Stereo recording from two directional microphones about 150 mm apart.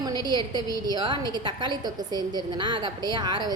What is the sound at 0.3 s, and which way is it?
A woman's voice, 30° right (ahead or behind).